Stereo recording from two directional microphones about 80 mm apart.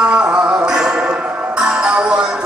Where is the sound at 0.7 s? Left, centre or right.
Centre.